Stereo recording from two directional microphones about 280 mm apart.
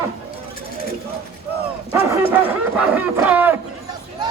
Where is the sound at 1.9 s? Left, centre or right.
Centre.